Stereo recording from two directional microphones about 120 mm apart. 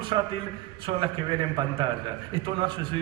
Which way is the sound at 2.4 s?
45° right (ahead or behind).